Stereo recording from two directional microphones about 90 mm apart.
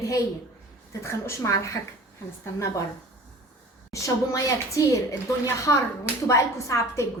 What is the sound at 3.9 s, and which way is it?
A woman's voice, 35° left (ahead or behind).